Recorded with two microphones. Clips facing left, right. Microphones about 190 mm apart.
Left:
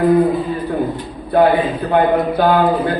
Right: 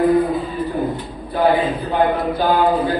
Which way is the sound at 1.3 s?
65° left (ahead or behind).